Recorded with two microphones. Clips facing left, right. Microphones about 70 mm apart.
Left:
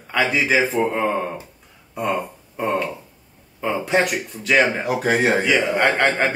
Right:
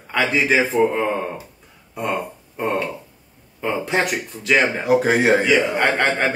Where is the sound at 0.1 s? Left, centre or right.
Centre.